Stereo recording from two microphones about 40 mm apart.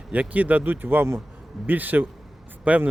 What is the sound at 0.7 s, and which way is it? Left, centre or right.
Speech, right.